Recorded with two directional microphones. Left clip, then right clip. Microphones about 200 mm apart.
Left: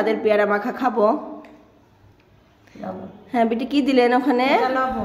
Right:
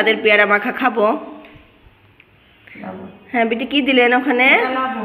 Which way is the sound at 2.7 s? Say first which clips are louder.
Even; 15° left (ahead or behind).